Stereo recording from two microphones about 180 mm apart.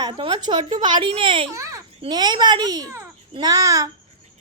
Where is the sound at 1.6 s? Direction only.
15° right (ahead or behind).